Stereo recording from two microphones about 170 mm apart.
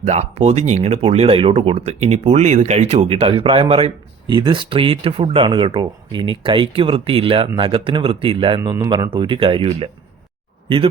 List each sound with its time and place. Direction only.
0.0 s speech: 40° right (ahead or behind)